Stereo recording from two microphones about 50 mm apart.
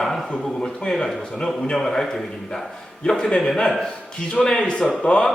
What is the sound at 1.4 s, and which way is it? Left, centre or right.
Speech, centre.